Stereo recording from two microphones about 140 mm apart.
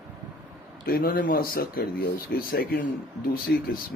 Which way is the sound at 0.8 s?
90° left.